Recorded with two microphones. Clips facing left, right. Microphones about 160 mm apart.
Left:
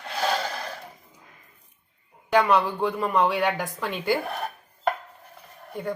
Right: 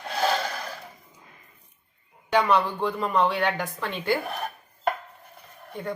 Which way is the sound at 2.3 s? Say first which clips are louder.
Left 1 dB; 5° left (ahead or behind).